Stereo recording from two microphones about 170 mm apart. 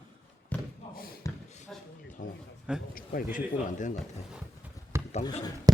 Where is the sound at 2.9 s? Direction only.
55° left (ahead or behind).